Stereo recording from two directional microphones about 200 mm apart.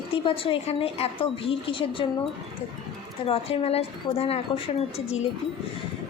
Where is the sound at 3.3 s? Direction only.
30° left (ahead or behind).